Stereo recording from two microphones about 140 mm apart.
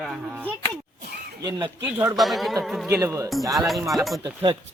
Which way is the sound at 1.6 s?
15° right (ahead or behind).